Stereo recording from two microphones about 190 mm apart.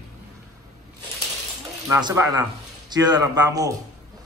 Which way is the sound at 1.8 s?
15° right (ahead or behind).